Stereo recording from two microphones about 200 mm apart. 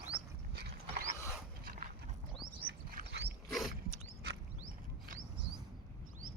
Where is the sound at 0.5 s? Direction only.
55° right (ahead or behind).